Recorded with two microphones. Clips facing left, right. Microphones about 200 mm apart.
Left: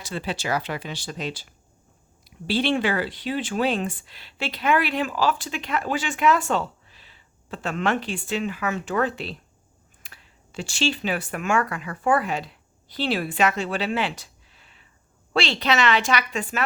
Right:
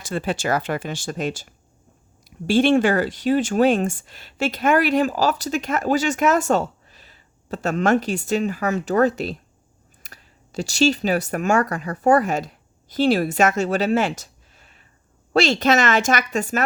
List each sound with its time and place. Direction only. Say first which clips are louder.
0.0 s speech: right 5 dB; 50° right (ahead or behind)